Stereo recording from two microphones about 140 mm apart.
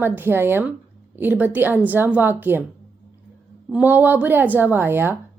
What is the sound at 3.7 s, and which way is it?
A woman's voice, 10° right (ahead or behind).